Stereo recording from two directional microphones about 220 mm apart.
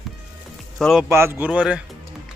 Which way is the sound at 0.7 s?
Centre (ahead or behind).